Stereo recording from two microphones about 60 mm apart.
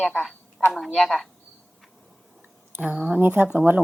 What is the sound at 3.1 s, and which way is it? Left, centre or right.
Speech, right.